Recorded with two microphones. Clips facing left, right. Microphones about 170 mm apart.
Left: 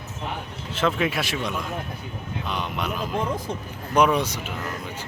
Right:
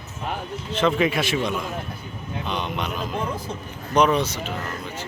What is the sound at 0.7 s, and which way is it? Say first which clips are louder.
Speech: right 3 dB; 5° left (ahead or behind).